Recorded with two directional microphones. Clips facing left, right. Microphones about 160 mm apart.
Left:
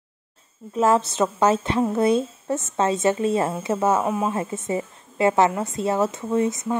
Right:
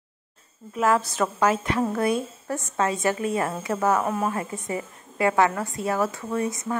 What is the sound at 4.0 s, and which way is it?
Speech, 10° left (ahead or behind).